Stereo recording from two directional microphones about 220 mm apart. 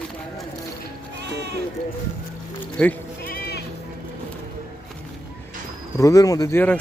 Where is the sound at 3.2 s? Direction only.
45° left (ahead or behind).